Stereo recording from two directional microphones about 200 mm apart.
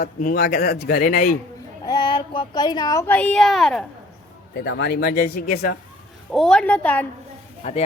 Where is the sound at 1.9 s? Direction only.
20° left (ahead or behind); by 3.8 s centre (ahead or behind).